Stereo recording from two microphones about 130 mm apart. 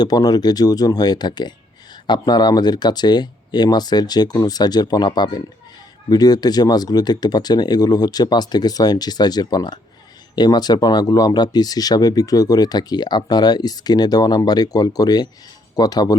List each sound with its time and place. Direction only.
0.0 s speech: 30° left (ahead or behind)